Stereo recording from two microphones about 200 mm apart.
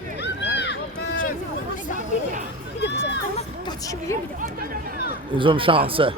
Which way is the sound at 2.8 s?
60° left (ahead or behind).